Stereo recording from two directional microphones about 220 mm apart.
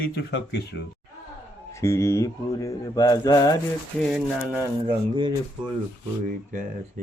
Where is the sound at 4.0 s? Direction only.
5° right (ahead or behind).